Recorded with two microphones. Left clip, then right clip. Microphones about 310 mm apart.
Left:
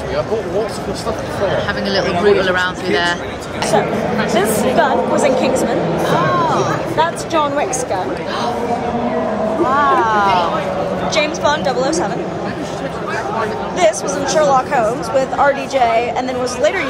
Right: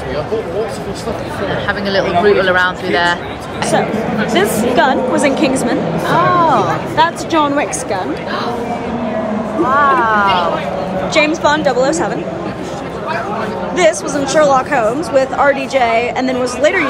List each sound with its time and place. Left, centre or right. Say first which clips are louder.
1.7 s speech: right 2 dB; centre
4.4 s speech: right 2 dB; right
6.0 s speech: right 5 dB; centre
7.0 s speech: right 4 dB; right
9.8 s speech: right 3 dB; centre
11.1 s speech: right 4 dB; right
13.7 s speech: right 2 dB; right